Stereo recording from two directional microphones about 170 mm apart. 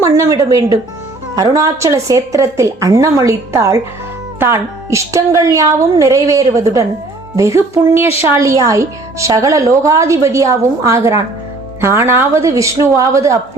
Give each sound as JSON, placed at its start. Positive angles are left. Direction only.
{"t": 0.0, "sound": "a woman's voice", "side_deg": -15}